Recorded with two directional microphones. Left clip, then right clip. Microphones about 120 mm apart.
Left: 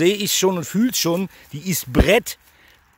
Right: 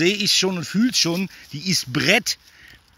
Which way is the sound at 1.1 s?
45° left (ahead or behind).